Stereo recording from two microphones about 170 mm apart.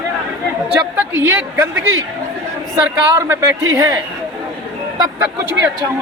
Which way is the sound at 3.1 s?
15° right (ahead or behind).